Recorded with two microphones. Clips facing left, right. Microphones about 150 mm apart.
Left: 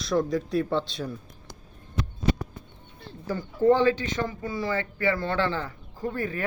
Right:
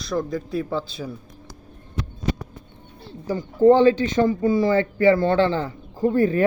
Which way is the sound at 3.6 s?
25° right (ahead or behind).